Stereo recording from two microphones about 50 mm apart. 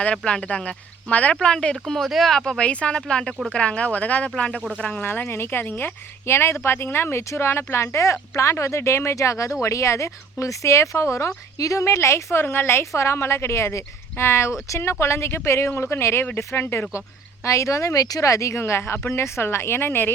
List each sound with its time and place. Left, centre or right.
0.3 s speech: left
1.4 s speech: centre
2.0 s speech: centre
2.3 s speech: centre
5.0 s speech: left
6.2 s speech: left
11.6 s speech: left
12.8 s speech: left
17.4 s speech: left